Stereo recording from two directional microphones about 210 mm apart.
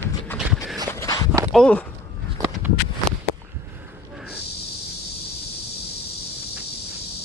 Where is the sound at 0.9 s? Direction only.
15° left (ahead or behind).